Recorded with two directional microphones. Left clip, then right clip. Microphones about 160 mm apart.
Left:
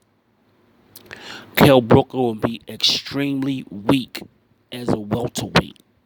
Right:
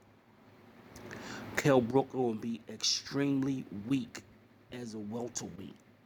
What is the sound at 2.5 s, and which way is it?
Speech, 45° left (ahead or behind).